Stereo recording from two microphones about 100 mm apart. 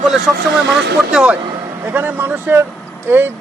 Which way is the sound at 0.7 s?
5° right (ahead or behind).